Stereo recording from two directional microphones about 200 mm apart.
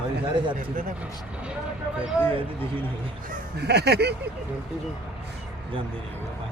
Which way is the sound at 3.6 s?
55° right (ahead or behind).